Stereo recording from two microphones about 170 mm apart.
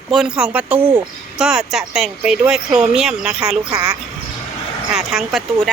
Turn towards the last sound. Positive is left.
turn(degrees=0)  # may be behind; listen again after turning